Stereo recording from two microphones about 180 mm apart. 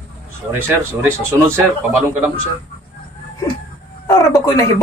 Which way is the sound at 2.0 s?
10° right (ahead or behind).